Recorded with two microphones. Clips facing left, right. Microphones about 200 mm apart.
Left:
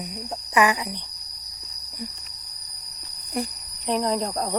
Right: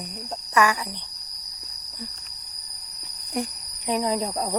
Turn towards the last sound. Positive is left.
turn(degrees=-5)  # may be behind; listen again after turning